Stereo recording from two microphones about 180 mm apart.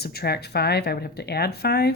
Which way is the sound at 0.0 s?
60° left (ahead or behind).